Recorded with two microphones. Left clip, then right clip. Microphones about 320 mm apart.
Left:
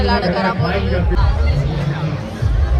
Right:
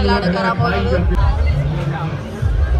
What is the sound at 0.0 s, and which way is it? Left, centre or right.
Speech, centre.